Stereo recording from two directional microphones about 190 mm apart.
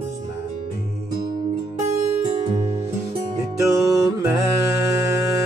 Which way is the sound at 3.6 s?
15° right (ahead or behind).